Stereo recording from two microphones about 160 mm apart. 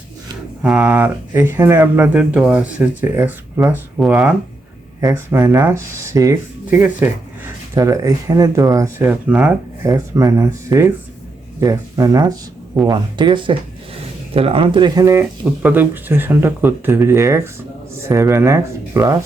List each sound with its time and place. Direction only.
0.6 s speech: 5° right (ahead or behind)
4.9 s speech: 15° right (ahead or behind)
9.8 s speech: 20° right (ahead or behind)